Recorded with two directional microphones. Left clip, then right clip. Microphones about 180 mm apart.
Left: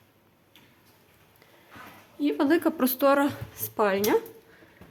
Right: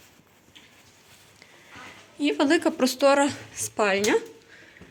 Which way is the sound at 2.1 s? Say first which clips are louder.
Right 2 dB; 10° left (ahead or behind).